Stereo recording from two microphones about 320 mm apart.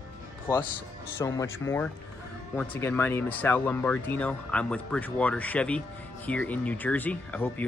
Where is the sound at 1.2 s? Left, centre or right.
Centre.